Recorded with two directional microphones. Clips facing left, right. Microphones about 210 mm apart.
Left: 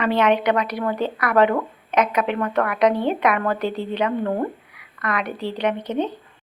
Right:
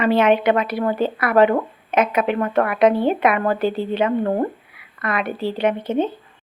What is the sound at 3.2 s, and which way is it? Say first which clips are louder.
Speech: right 2 dB; 30° right (ahead or behind).